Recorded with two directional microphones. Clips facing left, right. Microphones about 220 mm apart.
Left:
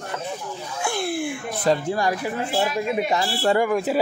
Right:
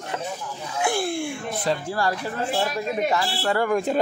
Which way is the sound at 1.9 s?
15° left (ahead or behind).